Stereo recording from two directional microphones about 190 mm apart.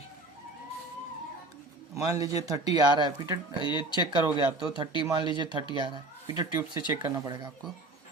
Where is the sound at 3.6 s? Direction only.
25° left (ahead or behind).